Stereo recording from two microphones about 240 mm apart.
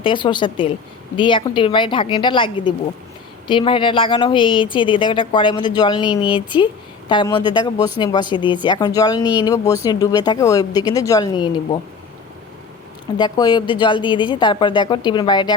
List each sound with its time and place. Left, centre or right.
0.0 s speech: centre
13.1 s speech: centre